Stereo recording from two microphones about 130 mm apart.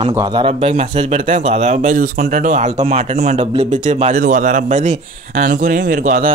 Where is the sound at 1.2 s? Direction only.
60° right (ahead or behind).